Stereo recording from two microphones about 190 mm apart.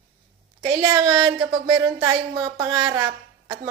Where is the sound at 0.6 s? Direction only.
20° right (ahead or behind).